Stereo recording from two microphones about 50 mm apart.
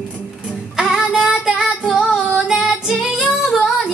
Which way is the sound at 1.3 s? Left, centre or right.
Centre.